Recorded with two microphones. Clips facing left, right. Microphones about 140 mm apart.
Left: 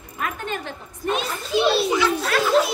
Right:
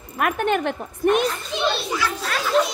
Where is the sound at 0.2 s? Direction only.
65° right (ahead or behind).